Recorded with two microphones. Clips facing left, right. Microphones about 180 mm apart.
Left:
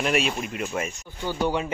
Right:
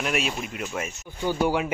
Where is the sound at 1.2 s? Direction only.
10° right (ahead or behind).